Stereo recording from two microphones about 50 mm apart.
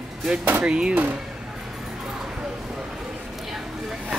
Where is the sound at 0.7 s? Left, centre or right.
Centre.